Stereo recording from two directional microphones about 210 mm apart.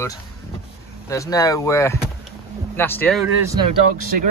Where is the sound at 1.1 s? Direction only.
15° left (ahead or behind).